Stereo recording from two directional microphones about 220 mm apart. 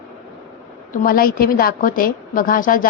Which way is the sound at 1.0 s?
40° left (ahead or behind).